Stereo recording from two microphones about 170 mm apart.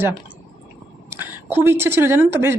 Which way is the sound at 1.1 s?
10° right (ahead or behind).